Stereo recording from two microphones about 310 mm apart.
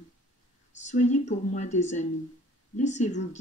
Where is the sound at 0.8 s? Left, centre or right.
Left.